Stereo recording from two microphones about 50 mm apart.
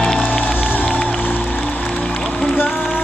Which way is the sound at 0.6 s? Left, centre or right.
Left.